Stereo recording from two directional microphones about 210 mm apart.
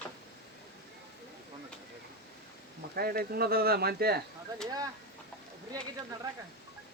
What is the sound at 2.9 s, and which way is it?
Speech, 45° right (ahead or behind).